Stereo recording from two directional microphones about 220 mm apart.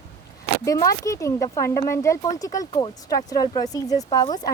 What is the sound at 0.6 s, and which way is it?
Speech, 15° left (ahead or behind).